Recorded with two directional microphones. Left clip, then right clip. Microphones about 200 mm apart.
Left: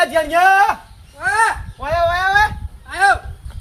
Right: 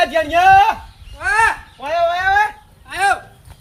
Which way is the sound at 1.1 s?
40° right (ahead or behind).